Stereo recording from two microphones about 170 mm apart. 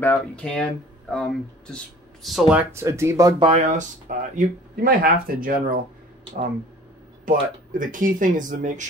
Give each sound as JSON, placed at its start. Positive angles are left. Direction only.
{"t": 0.0, "sound": "speech", "side_deg": 10}
{"t": 2.7, "sound": "speech", "side_deg": -15}
{"t": 3.4, "sound": "speech", "side_deg": -40}
{"t": 4.4, "sound": "speech", "side_deg": -60}
{"t": 7.2, "sound": "speech", "side_deg": -50}